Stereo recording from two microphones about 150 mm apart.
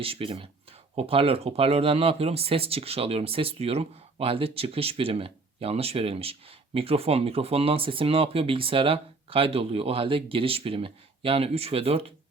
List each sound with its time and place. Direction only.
0.0 s speech: 35° right (ahead or behind)